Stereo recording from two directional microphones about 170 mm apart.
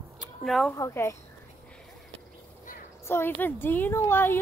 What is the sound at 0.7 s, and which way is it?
Speech, 15° left (ahead or behind).